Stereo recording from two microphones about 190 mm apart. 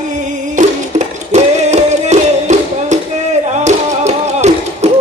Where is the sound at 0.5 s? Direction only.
40° right (ahead or behind).